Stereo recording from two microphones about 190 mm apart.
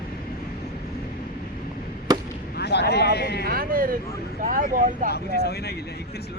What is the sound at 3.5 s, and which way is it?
Speech, 50° right (ahead or behind).